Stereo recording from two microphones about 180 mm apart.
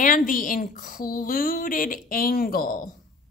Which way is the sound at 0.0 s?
45° left (ahead or behind).